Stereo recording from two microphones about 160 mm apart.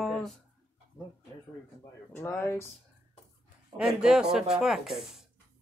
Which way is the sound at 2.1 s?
15° left (ahead or behind).